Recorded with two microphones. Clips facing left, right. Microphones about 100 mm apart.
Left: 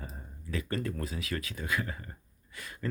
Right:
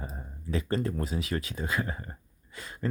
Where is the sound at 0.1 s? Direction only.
30° right (ahead or behind).